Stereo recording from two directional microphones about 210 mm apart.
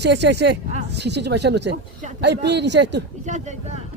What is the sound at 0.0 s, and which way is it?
Speech, 55° right (ahead or behind).